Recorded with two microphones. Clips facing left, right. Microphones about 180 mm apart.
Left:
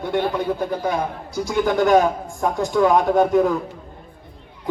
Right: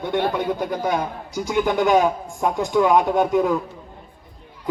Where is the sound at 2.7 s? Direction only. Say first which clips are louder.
Left 1 dB; centre (ahead or behind).